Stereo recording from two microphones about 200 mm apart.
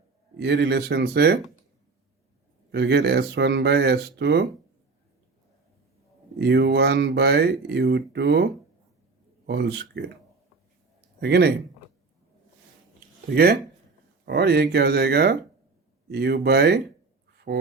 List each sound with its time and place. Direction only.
0.3 s speech: 60° right (ahead or behind)
2.7 s speech: 55° right (ahead or behind)
6.4 s speech: 55° right (ahead or behind)
9.5 s speech: 55° right (ahead or behind)
11.2 s speech: 55° right (ahead or behind)
13.3 s speech: 50° right (ahead or behind)
17.3 s dog: 50° right (ahead or behind)